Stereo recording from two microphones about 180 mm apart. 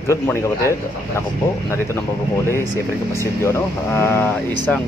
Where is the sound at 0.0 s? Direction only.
15° left (ahead or behind).